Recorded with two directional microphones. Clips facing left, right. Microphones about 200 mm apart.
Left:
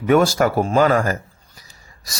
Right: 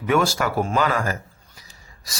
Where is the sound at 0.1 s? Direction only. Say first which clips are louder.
Left 5 dB; 45° left (ahead or behind).